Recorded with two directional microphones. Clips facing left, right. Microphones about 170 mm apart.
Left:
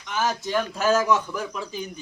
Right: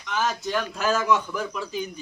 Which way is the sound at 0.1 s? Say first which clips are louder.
Left 1 dB; 5° left (ahead or behind).